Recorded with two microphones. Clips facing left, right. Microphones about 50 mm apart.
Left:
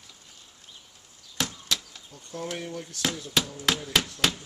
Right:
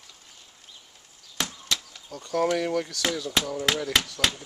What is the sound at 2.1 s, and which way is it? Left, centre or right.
Speech, right.